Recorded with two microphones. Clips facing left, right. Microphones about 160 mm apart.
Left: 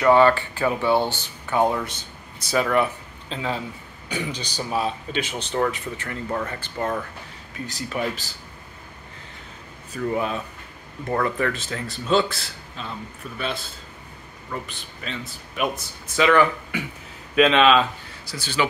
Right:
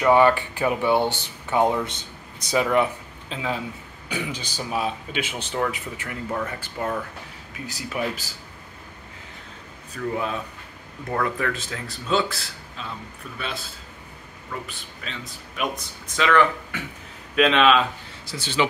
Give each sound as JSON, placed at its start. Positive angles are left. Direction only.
{"t": 0.0, "sound": "speech", "side_deg": -15}
{"t": 3.3, "sound": "speech", "side_deg": -5}
{"t": 10.1, "sound": "speech", "side_deg": 0}
{"t": 14.7, "sound": "speech", "side_deg": 0}
{"t": 18.2, "sound": "speech", "side_deg": -20}